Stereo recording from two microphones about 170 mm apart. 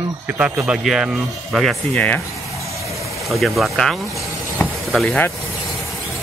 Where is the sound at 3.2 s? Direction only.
Centre (ahead or behind).